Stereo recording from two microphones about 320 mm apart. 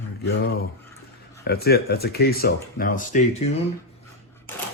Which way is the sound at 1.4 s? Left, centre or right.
Left.